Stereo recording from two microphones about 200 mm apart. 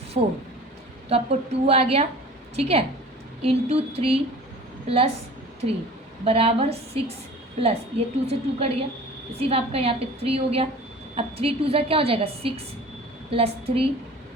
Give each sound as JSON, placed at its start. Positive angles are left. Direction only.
{"t": 0.1, "sound": "a woman's voice", "side_deg": -35}
{"t": 6.2, "sound": "a woman's voice", "side_deg": -30}